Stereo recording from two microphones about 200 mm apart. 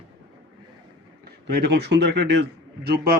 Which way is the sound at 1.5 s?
55° right (ahead or behind).